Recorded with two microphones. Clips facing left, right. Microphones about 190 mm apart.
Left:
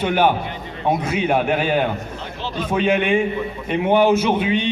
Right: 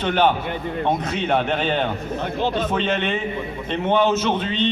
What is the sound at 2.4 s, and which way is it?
Speech, 50° right (ahead or behind).